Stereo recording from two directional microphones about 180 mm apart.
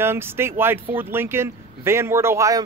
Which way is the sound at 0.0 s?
15° right (ahead or behind).